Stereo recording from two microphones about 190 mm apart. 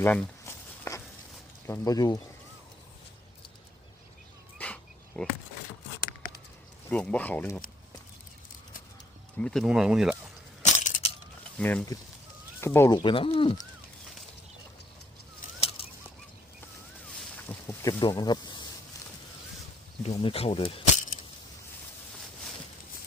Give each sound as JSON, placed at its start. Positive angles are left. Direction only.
{"t": 0.0, "sound": "a sound", "side_deg": 10}
{"t": 1.6, "sound": "speech", "side_deg": 15}
{"t": 4.5, "sound": "insect", "side_deg": 5}
{"t": 6.8, "sound": "speech", "side_deg": 5}
{"t": 9.4, "sound": "speech", "side_deg": 5}
{"t": 10.6, "sound": "crushing", "side_deg": 40}
{"t": 11.5, "sound": "speech", "side_deg": 5}
{"t": 17.1, "sound": "a sound", "side_deg": 5}
{"t": 20.0, "sound": "speech", "side_deg": 30}